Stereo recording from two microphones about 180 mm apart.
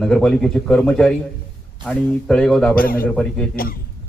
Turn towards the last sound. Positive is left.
turn(degrees=55)  # may be behind; listen again after turning